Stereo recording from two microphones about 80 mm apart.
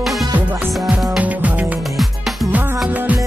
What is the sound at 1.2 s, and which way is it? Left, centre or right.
Music, centre.